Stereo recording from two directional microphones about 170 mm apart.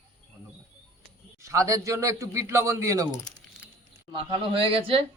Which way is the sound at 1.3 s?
20° right (ahead or behind).